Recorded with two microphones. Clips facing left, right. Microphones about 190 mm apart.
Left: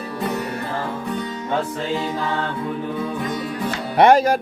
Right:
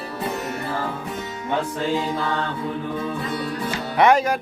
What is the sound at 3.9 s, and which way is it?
Music, 35° left (ahead or behind).